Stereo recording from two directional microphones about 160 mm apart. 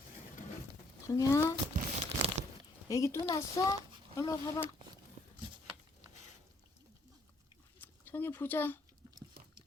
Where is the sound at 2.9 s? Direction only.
20° left (ahead or behind).